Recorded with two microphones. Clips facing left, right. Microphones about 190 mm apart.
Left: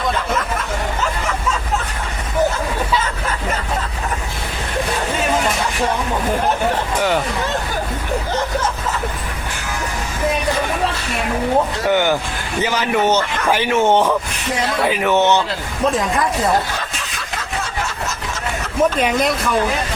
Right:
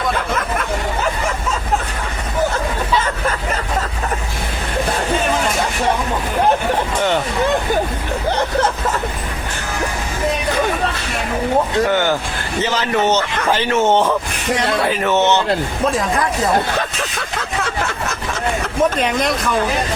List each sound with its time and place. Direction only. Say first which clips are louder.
11.9 s vehicle: left 1 dB; 15° left (ahead or behind)
12.6 s speech: even; 15° left (ahead or behind)
15.9 s speech: left 2 dB; centre (ahead or behind)
16.7 s a sound: right 6 dB; 60° right (ahead or behind)
18.8 s speech: left 2 dB; 5° left (ahead or behind)